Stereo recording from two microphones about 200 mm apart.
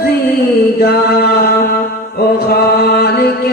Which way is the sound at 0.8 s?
50° left (ahead or behind).